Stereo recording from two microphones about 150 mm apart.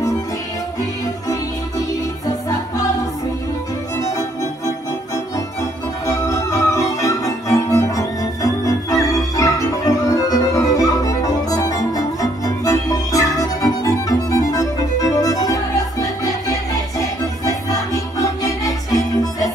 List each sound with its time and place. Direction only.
6.0 s music: 20° left (ahead or behind)